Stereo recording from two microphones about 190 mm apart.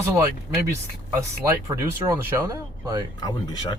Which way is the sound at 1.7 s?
15° right (ahead or behind).